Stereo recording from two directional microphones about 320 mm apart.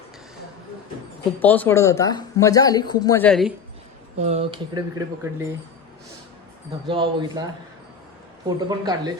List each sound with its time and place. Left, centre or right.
1.4 s speech: centre
4.2 s speech: centre
6.8 s speech: centre
8.4 s speech: centre